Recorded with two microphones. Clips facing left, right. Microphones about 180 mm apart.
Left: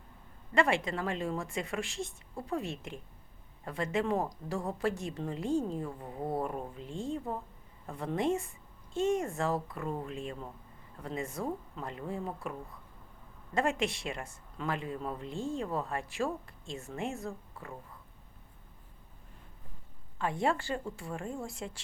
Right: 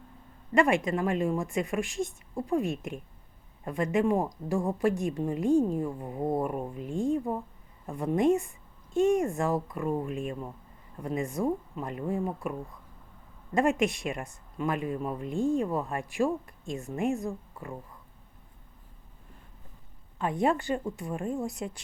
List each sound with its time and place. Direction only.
0.5 s a man's voice: 15° right (ahead or behind)
20.1 s speech: 20° right (ahead or behind)